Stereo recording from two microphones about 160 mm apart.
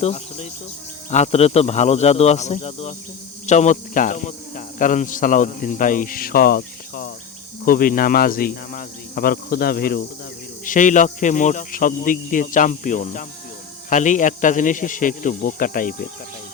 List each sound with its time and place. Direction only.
0.0 s insect: 40° left (ahead or behind)
1.1 s speech: 45° left (ahead or behind); by 10.0 s 75° left (ahead or behind)
10.7 s speech: 55° left (ahead or behind)